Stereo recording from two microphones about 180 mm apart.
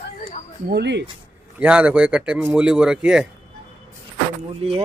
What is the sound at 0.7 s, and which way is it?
Speech, 70° right (ahead or behind).